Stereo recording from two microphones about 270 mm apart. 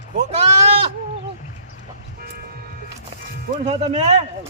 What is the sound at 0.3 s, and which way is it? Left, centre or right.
Speech, right.